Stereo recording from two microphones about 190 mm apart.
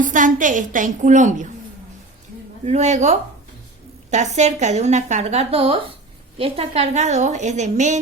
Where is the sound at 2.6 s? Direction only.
35° right (ahead or behind).